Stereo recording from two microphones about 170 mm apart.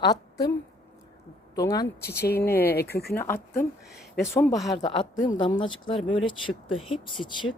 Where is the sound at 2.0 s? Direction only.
70° left (ahead or behind).